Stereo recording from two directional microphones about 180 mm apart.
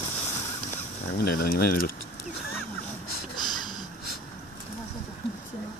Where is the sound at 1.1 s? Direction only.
60° left (ahead or behind).